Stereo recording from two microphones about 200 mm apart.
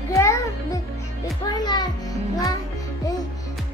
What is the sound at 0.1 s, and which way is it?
Music, 15° left (ahead or behind).